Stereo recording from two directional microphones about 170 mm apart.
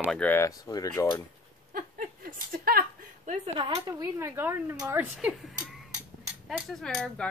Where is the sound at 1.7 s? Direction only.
55° right (ahead or behind).